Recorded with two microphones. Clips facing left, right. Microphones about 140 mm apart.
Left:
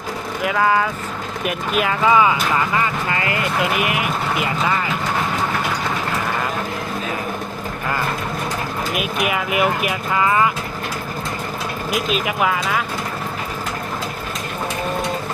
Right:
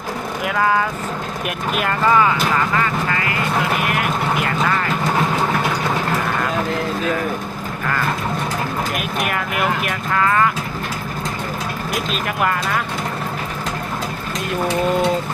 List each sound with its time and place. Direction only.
0.4 s speech: centre (ahead or behind)
2.8 s speech: 20° left (ahead or behind)
3.8 s speech: 5° left (ahead or behind)
9.0 s speech: 5° left (ahead or behind)
11.9 s speech: 5° left (ahead or behind)